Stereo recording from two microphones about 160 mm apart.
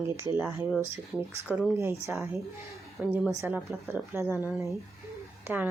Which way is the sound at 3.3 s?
15° right (ahead or behind).